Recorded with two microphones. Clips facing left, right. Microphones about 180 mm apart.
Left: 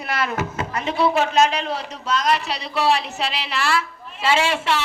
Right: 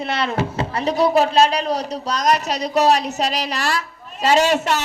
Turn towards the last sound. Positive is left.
turn(degrees=-40)  # may be behind; listen again after turning